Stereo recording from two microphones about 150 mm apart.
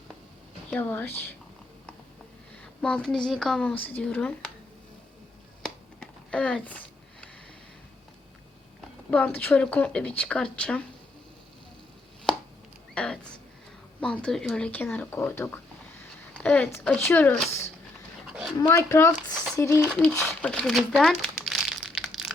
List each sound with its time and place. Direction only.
0.7 s speech: 15° left (ahead or behind)
2.8 s a woman's voice: 5° left (ahead or behind)
6.3 s a sound: 5° left (ahead or behind)
9.0 s speech: 10° left (ahead or behind)
12.9 s a sound: 5° left (ahead or behind)
14.0 s speech: 5° left (ahead or behind)
18.3 s dog: 5° right (ahead or behind)
18.6 s speech: 20° left (ahead or behind)
20.4 s crumpling: 5° left (ahead or behind)